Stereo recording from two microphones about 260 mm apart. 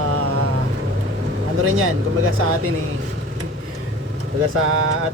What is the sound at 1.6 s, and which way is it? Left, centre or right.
Speech, right.